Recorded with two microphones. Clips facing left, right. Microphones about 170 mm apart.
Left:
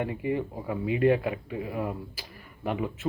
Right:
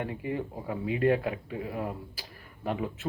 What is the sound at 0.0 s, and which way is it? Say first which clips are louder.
Speech: left 4 dB; 5° left (ahead or behind).